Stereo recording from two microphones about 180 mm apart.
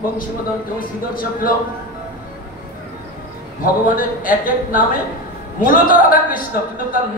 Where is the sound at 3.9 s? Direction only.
50° left (ahead or behind).